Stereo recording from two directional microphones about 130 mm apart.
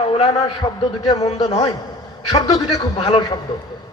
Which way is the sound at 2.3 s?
35° left (ahead or behind).